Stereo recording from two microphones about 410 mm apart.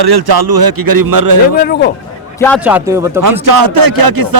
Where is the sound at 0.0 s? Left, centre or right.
Right.